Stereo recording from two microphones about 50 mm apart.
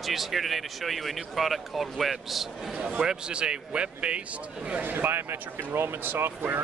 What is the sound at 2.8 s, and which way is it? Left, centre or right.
Speech, centre.